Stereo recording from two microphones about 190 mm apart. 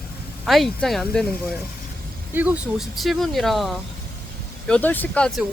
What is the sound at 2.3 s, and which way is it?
Speech, 10° right (ahead or behind).